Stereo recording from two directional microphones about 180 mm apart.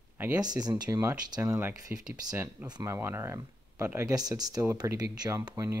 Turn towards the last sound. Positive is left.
turn(degrees=-15)  # may be behind; listen again after turning